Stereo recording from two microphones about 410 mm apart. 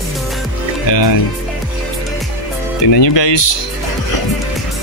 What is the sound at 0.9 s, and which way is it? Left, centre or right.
Speech, left.